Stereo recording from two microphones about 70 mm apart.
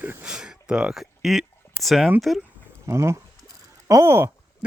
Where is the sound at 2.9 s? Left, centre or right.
Right.